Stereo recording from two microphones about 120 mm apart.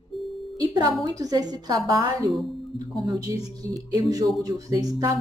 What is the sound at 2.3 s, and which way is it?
Speech, centre (ahead or behind).